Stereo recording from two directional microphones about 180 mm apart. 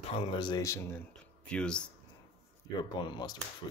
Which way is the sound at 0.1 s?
30° left (ahead or behind).